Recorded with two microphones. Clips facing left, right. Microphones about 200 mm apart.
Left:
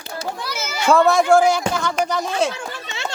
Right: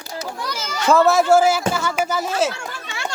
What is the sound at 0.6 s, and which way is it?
Children playing, 10° left (ahead or behind).